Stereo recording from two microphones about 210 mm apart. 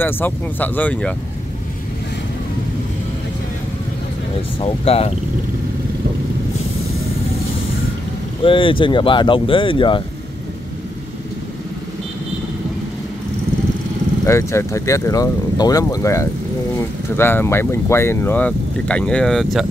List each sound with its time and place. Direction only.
0.0 s speech: 10° left (ahead or behind)
4.6 s speech: 30° left (ahead or behind)
8.4 s speech: 25° left (ahead or behind)
14.2 s speech: 15° left (ahead or behind)